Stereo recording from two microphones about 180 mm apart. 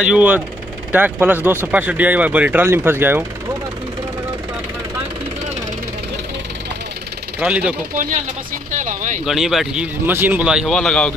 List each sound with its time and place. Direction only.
0.0 s speech: 5° right (ahead or behind)
7.3 s speech: 5° right (ahead or behind)
8.7 s speech: 45° right (ahead or behind)
9.2 s speech: centre (ahead or behind)